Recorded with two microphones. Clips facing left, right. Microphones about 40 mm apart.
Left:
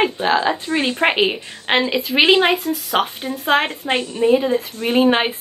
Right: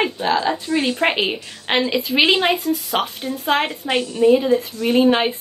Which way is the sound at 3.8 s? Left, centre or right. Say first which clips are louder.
Right 5 dB; left.